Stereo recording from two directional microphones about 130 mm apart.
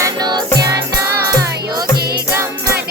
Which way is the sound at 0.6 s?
20° right (ahead or behind).